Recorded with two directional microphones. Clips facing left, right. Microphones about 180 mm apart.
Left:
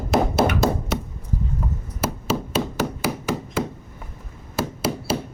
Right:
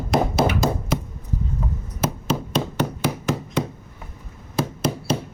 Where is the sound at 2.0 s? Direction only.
5° left (ahead or behind).